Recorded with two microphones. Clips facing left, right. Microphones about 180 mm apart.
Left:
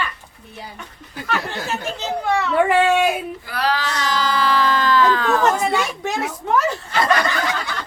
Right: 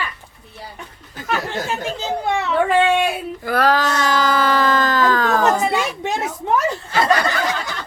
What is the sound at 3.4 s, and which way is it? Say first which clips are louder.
Baby cry: right 10 dB; 50° right (ahead or behind).